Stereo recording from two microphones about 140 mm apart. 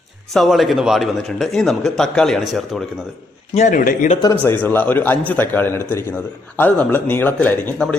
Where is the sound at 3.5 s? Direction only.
60° left (ahead or behind).